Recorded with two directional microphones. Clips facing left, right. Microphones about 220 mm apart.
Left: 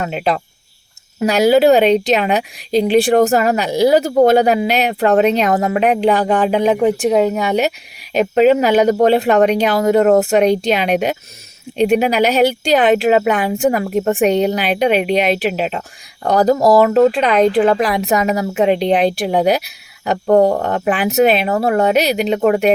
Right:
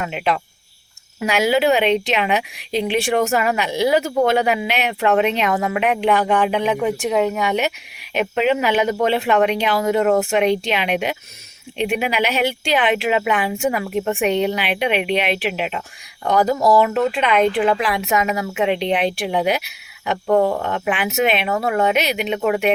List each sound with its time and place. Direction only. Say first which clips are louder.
0.0 s speech: left 3 dB; 35° left (ahead or behind)